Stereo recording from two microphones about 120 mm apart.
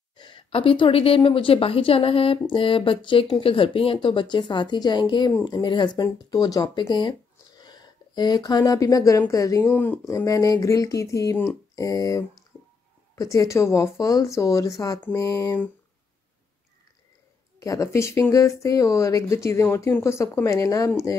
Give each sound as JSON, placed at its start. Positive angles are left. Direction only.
{"t": 0.2, "sound": "a woman's voice", "side_deg": 45}
{"t": 17.6, "sound": "speech", "side_deg": 25}